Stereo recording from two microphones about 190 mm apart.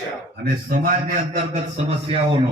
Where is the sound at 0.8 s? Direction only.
45° right (ahead or behind).